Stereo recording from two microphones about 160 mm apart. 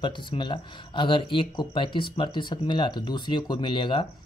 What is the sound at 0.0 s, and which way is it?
Speech, 30° left (ahead or behind).